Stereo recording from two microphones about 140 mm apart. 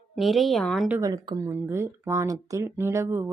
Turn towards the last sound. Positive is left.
turn(degrees=-20)  # may be behind; listen again after turning